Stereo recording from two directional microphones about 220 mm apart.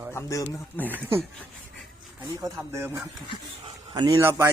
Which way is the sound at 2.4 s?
10° right (ahead or behind).